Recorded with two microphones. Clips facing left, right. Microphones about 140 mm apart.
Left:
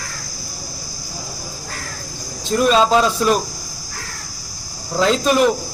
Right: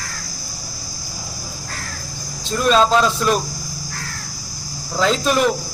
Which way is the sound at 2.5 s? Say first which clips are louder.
Left 1 dB; 5° left (ahead or behind).